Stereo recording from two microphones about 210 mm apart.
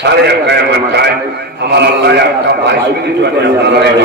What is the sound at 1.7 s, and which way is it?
Speech, 50° right (ahead or behind).